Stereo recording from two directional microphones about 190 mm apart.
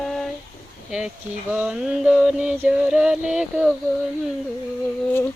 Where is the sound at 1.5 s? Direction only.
5° right (ahead or behind).